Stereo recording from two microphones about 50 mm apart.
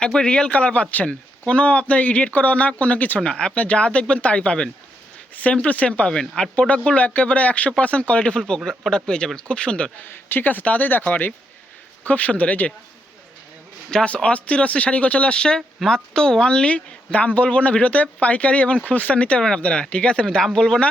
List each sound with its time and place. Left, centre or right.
0.0 s speech: centre
3.2 s speech: centre
5.3 s speech: left
6.1 s speech: centre
10.0 s speech: left
13.9 s speech: left
19.4 s speech: centre